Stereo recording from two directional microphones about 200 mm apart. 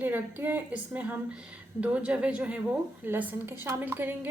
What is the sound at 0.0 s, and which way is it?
A woman's voice, 10° right (ahead or behind).